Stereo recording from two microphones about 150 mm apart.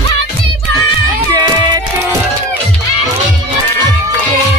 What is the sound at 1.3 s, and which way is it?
Music, 25° right (ahead or behind).